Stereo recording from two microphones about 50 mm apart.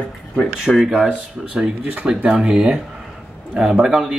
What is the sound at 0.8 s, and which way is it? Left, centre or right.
Speech, centre.